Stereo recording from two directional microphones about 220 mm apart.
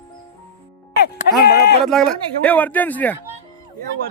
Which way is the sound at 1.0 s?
45° left (ahead or behind).